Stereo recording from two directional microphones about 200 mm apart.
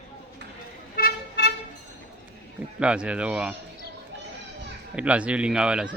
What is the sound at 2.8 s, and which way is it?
Speech, 5° right (ahead or behind).